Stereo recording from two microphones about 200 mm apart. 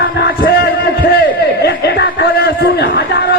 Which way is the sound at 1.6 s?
55° left (ahead or behind).